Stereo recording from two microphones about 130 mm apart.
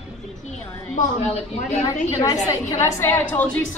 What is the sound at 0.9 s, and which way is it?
Speech, 60° left (ahead or behind).